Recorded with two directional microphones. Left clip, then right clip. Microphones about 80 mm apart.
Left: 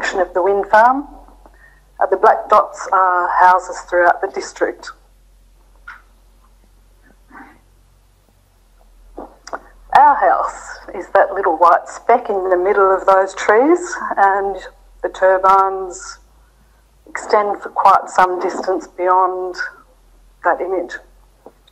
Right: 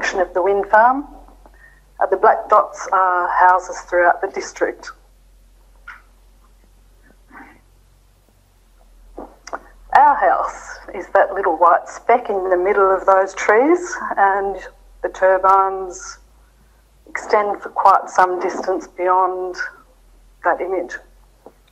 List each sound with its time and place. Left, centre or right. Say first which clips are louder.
0.0 s speech: left 1 dB; left
5.9 s cat: left 2 dB; left
7.1 s cat: left 1 dB; left
9.1 s a woman's voice: left 1 dB; left
21.5 s a sound: left 2 dB; left